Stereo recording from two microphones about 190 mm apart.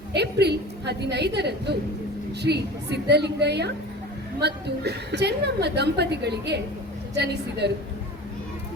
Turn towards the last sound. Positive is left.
turn(degrees=-60)  # may be behind; listen again after turning